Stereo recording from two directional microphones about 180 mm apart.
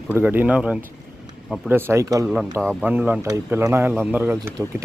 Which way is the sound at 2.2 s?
Centre (ahead or behind).